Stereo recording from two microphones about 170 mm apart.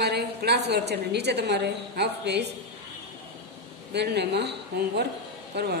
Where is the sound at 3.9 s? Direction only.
80° right.